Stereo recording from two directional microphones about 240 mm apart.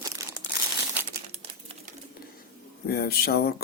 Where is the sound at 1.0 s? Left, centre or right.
Right.